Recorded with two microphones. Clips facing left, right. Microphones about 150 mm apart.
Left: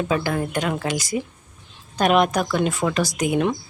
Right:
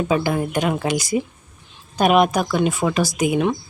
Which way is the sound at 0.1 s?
15° right (ahead or behind).